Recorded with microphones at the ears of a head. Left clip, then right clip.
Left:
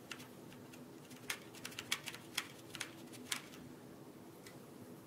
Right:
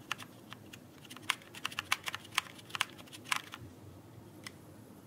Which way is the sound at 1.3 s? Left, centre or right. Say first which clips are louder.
Right 9 dB; right.